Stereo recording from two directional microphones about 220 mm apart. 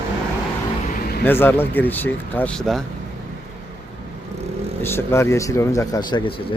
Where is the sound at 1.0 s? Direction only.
45° left (ahead or behind).